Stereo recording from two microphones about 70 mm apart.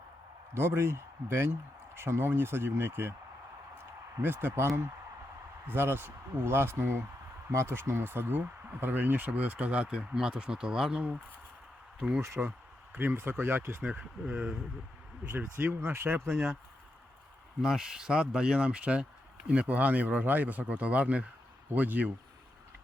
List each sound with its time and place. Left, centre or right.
0.5 s speech: right; by 12.2 s centre
12.2 s speech: right
13.8 s speech: centre
15.2 s speech: right
15.5 s speech: right
17.6 s speech: centre; by 22.1 s right